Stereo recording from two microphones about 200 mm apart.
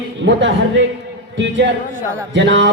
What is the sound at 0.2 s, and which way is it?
A woman's voice, 65° right (ahead or behind).